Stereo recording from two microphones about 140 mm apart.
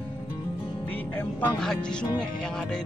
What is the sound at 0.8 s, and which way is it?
Music, 10° left (ahead or behind).